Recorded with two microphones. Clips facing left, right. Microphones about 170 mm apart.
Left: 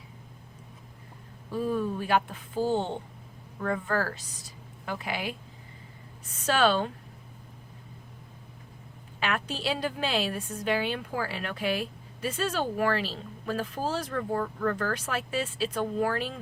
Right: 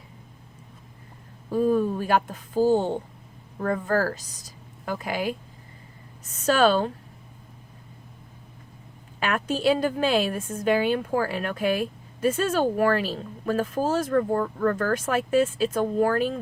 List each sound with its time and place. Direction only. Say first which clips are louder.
1.5 s a woman's voice: right 7 dB; 45° right (ahead or behind)
9.2 s a woman's voice: right 7 dB; 45° right (ahead or behind)